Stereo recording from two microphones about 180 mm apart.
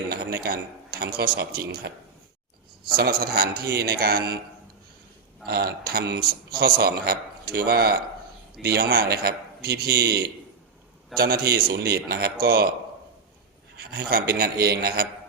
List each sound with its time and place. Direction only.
0.4 s a man's voice: 55° right (ahead or behind)
2.9 s a man's voice: 60° right (ahead or behind)
5.5 s a man's voice: 60° right (ahead or behind)
11.1 s a man's voice: centre (ahead or behind)
11.5 s a man's voice: 60° right (ahead or behind)
13.7 s a man's voice: 60° right (ahead or behind)